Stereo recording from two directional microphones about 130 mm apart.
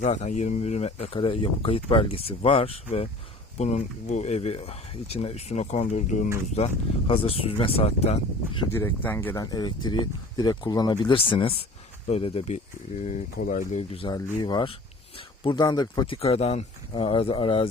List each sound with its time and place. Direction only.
0.0 s speech: 65° left (ahead or behind)
3.6 s speech: 60° left (ahead or behind)
6.6 s speech: 55° left (ahead or behind)
8.7 s speech: 15° left (ahead or behind); by 13.7 s 75° left (ahead or behind)
13.7 s speech: 45° left (ahead or behind)
14.1 s speech: 35° left (ahead or behind)
16.1 s speech: 50° left (ahead or behind)